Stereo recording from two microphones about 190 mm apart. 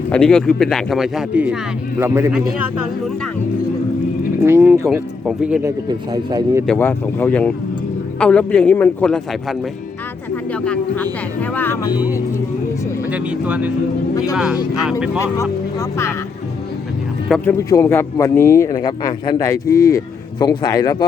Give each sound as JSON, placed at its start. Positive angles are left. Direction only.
{"t": 0.1, "sound": "speech", "side_deg": 5}
{"t": 4.4, "sound": "speech", "side_deg": -15}
{"t": 6.3, "sound": "speech", "side_deg": -15}
{"t": 6.7, "sound": "a man's voice", "side_deg": 10}
{"t": 13.1, "sound": "speech", "side_deg": -5}
{"t": 15.2, "sound": "a man's voice", "side_deg": 15}
{"t": 17.2, "sound": "a man's voice", "side_deg": 5}